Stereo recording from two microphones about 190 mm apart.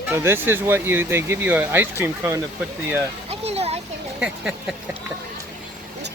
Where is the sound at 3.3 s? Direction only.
35° right (ahead or behind).